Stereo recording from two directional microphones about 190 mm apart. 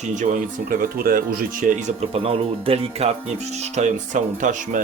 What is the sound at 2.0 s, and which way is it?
Speech, 30° right (ahead or behind).